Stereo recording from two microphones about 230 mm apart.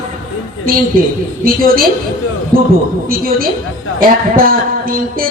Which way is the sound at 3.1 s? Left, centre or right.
Right.